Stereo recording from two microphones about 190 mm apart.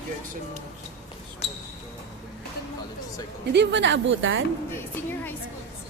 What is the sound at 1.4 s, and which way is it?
Basketball bounce, 35° left (ahead or behind).